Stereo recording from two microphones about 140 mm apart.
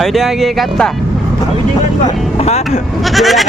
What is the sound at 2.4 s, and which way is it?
Vehicle, 50° left (ahead or behind).